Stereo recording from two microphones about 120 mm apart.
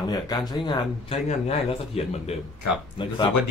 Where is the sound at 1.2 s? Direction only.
60° left (ahead or behind).